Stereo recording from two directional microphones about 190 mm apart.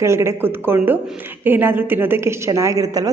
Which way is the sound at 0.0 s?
15° right (ahead or behind).